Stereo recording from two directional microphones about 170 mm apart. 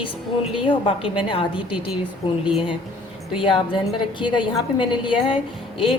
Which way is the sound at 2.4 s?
5° right (ahead or behind).